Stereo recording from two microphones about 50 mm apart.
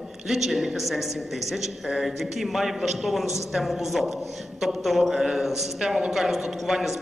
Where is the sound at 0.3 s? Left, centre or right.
Centre.